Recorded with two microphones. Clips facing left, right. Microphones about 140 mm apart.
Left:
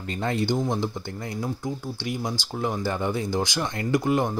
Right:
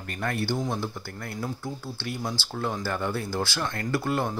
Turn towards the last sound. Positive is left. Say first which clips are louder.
# left 4 dB
turn(degrees=15)  # may be behind; listen again after turning